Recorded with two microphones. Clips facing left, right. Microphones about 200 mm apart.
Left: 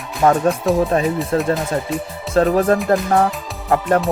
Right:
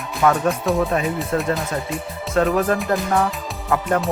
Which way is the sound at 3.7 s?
35° left (ahead or behind).